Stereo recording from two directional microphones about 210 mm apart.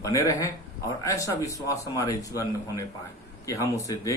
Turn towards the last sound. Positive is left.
turn(degrees=15)  # may be behind; listen again after turning